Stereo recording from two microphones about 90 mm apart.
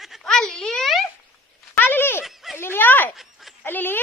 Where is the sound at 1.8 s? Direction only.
25° left (ahead or behind).